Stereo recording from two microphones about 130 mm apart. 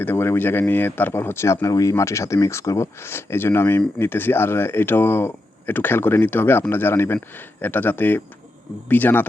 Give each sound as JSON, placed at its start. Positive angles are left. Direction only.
{"t": 0.0, "sound": "speech", "side_deg": 15}